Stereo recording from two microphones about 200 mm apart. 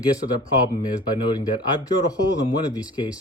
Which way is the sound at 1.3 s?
20° left (ahead or behind).